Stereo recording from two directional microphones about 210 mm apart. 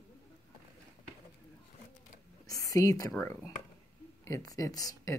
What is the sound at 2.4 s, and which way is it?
A woman's voice, 15° left (ahead or behind).